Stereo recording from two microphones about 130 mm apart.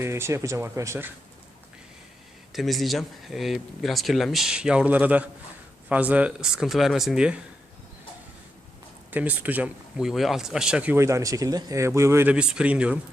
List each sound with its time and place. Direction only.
0.0 s speech: 20° right (ahead or behind)
2.5 s speech: centre (ahead or behind)
9.0 s speech: 10° right (ahead or behind)
10.9 s speech: 25° right (ahead or behind)
12.3 s speech: 10° right (ahead or behind)